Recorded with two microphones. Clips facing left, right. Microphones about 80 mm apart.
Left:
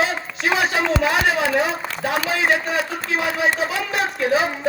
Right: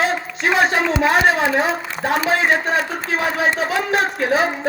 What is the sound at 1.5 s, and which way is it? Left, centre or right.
A woman's voice, right.